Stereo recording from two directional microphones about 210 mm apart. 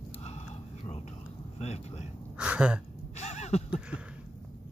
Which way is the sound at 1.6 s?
30° left (ahead or behind).